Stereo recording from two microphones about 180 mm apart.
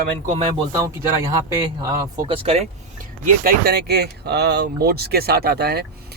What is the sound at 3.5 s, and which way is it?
Speech, 60° right (ahead or behind).